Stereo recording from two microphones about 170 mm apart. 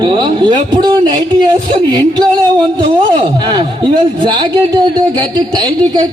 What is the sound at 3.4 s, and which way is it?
A man's voice, 25° right (ahead or behind).